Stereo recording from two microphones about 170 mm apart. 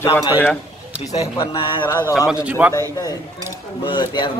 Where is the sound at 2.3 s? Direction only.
5° right (ahead or behind).